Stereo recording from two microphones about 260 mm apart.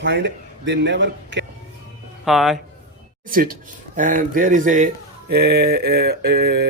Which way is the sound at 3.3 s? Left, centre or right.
Right.